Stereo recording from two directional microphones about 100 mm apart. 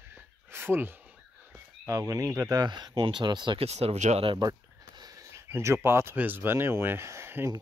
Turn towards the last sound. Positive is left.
turn(degrees=-25)  # may be behind; listen again after turning